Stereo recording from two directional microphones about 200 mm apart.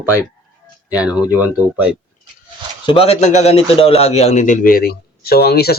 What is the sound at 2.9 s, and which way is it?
A man's voice, 30° left (ahead or behind).